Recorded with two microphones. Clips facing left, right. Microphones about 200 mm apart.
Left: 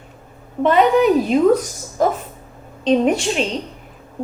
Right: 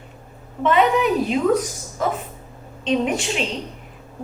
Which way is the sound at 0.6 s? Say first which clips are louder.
Left 4 dB; 40° left (ahead or behind).